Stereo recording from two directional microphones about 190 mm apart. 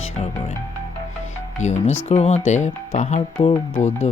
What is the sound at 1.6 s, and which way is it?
Speech, 40° left (ahead or behind).